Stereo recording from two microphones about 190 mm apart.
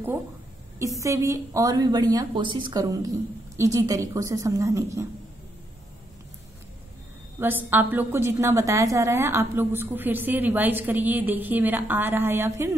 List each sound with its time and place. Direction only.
0.7 s a woman's voice: 15° right (ahead or behind)
7.3 s a woman's voice: 10° right (ahead or behind)